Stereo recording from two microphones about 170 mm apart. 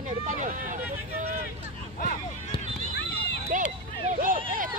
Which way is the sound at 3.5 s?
45° right (ahead or behind).